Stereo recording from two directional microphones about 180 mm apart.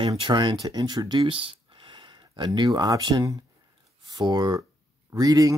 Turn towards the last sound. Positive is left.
turn(degrees=-20)  # may be behind; listen again after turning